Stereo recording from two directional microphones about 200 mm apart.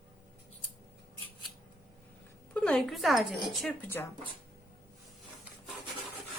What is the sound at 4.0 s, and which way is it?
Speech, 10° left (ahead or behind).